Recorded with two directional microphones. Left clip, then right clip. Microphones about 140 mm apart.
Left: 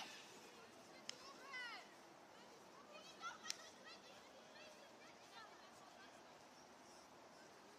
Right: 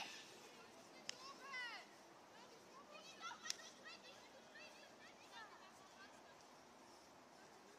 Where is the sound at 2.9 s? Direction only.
25° right (ahead or behind).